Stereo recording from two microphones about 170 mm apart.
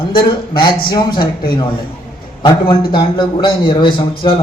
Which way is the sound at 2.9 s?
25° left (ahead or behind).